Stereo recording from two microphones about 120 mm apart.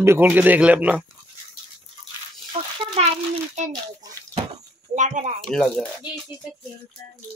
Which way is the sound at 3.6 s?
75° right (ahead or behind).